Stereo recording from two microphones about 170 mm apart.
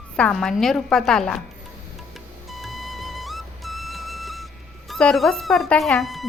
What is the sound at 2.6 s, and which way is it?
Music, centre (ahead or behind).